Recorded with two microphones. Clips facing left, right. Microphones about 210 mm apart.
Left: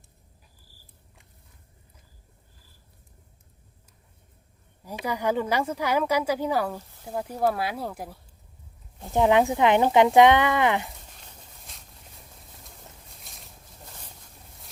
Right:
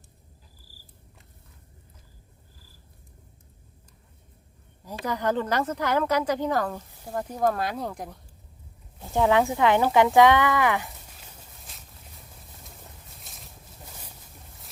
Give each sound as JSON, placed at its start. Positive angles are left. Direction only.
{"t": 4.9, "sound": "speech", "side_deg": 10}
{"t": 9.1, "sound": "speech", "side_deg": 20}
{"t": 11.2, "sound": "a sound", "side_deg": 0}
{"t": 12.4, "sound": "boat", "side_deg": 0}